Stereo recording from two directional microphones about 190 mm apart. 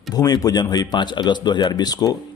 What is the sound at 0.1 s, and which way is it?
Speech, 20° left (ahead or behind).